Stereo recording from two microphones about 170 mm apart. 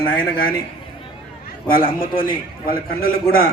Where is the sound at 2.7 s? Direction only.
60° left (ahead or behind).